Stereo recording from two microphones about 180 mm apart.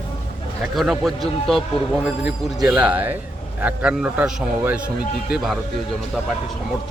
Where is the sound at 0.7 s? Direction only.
Centre (ahead or behind).